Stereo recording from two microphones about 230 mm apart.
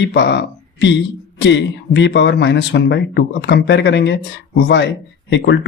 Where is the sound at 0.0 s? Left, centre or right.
Left.